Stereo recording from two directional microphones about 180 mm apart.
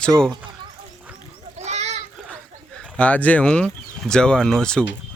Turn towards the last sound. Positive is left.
turn(degrees=5)  # may be behind; listen again after turning